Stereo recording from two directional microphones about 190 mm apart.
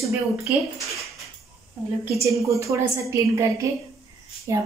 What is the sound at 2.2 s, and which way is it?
Speech, 15° right (ahead or behind).